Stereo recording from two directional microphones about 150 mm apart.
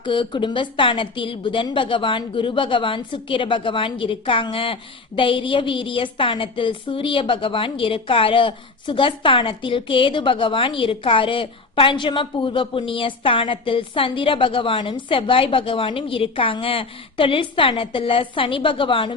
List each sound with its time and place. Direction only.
0.0 s a woman's voice: 35° left (ahead or behind)